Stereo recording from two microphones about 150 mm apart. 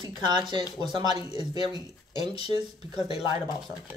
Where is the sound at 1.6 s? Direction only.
30° right (ahead or behind).